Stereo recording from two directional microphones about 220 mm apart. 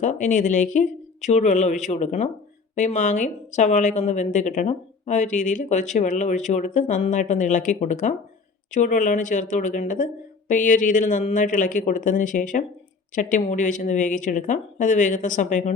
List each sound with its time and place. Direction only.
0.0 s a woman's voice: 35° left (ahead or behind)